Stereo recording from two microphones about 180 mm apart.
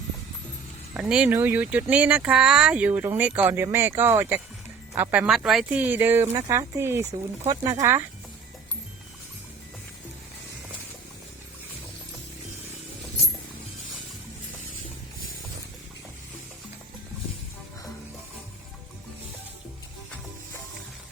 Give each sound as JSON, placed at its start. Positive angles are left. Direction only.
{"t": 0.9, "sound": "speech", "side_deg": -5}